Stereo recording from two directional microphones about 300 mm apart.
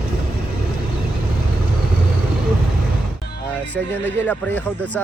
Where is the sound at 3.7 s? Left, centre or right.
Centre.